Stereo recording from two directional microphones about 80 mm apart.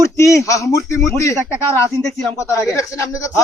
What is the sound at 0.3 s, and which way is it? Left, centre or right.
Speech, left.